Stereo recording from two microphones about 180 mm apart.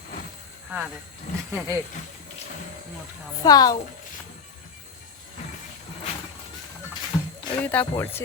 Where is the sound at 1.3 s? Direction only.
40° left (ahead or behind).